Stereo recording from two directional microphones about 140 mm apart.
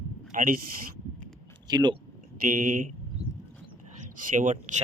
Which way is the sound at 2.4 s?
80° right.